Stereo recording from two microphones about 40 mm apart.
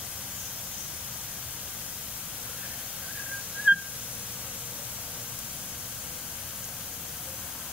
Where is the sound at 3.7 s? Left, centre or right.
Right.